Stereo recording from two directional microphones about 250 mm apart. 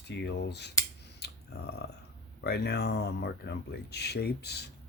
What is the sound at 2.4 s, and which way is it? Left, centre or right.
Speech, left.